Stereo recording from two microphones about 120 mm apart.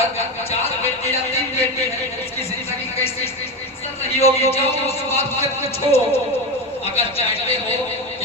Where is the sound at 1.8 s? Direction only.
60° left (ahead or behind).